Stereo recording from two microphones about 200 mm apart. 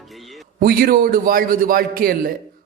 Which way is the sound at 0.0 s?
Centre (ahead or behind).